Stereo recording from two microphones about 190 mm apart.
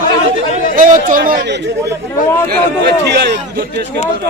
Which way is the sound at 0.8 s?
45° right (ahead or behind).